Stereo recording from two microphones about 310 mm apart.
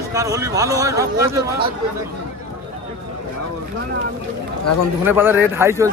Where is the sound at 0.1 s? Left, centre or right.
Centre.